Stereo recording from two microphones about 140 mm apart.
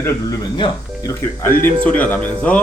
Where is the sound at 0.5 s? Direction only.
30° left (ahead or behind).